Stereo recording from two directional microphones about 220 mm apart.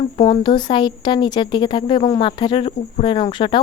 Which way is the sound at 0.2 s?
20° left (ahead or behind).